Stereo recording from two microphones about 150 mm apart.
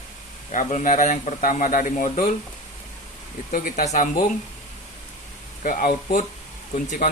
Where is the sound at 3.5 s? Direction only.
65° left (ahead or behind).